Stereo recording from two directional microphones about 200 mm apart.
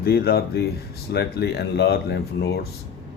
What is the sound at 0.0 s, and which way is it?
Speech, 50° left (ahead or behind).